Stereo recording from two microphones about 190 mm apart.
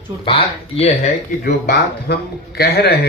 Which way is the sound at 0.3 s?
30° left (ahead or behind).